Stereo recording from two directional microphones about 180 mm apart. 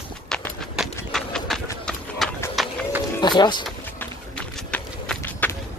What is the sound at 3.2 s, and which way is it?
Music, 25° left (ahead or behind).